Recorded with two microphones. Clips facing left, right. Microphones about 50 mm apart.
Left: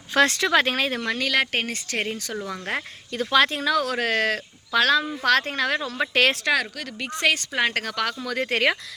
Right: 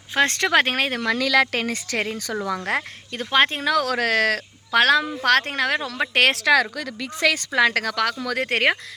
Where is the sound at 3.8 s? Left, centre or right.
Right.